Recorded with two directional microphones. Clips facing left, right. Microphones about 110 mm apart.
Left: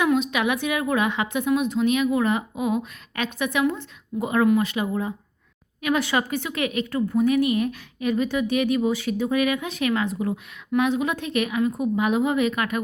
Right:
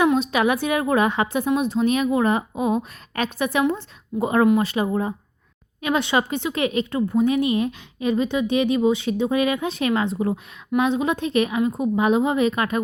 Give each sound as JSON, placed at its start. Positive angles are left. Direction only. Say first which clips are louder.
{"t": 0.0, "sound": "a woman's voice", "louder": "right 3 dB", "side_deg": -35}
{"t": 5.8, "sound": "a woman's voice", "louder": "right 2 dB", "side_deg": -25}